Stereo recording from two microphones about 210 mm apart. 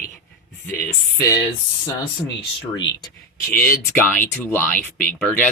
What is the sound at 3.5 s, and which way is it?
Speech, 10° left (ahead or behind).